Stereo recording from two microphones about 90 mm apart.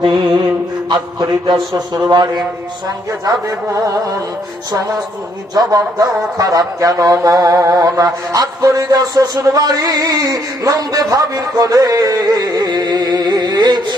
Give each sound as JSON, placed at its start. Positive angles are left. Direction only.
{"t": 0.0, "sound": "mantra", "side_deg": -60}
{"t": 0.9, "sound": "speech", "side_deg": -55}
{"t": 3.2, "sound": "music", "side_deg": -35}
{"t": 5.5, "sound": "speech", "side_deg": -45}